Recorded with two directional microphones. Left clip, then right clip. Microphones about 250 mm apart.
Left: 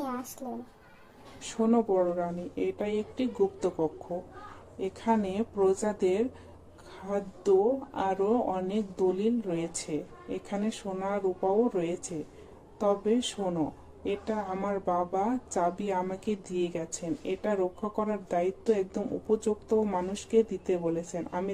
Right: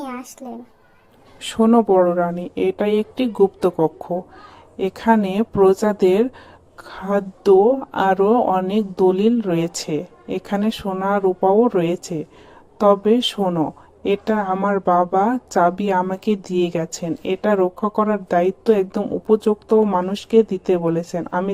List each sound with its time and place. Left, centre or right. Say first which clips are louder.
0.0 s a child's voice: right 5 dB; centre
1.4 s a woman's voice: right 11 dB; right